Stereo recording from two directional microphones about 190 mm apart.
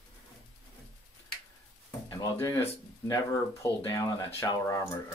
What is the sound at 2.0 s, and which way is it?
Speech, 15° left (ahead or behind).